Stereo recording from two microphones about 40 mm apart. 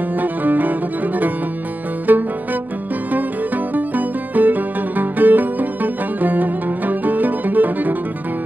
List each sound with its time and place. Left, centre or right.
0.2 s music: right
3.7 s music: right